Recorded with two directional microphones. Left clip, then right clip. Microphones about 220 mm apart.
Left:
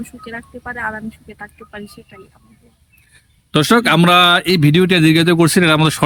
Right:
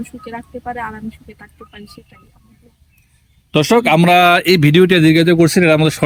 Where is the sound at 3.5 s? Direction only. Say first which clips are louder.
Right 1 dB; 5° left (ahead or behind).